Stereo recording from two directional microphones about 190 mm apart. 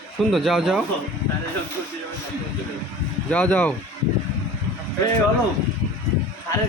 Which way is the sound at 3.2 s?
5° left (ahead or behind).